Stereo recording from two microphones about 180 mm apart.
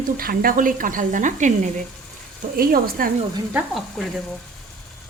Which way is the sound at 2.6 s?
55° right (ahead or behind).